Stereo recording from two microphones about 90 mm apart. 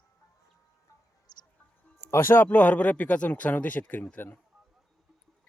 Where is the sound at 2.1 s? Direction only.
25° left (ahead or behind).